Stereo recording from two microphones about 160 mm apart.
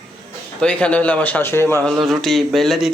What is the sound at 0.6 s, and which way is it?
A man's voice, 5° left (ahead or behind).